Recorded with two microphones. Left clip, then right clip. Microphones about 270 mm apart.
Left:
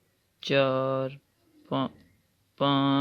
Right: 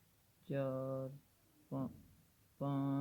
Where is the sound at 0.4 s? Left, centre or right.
Left.